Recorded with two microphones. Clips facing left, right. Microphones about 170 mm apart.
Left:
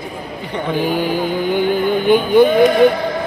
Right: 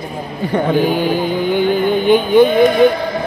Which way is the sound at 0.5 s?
45° right (ahead or behind).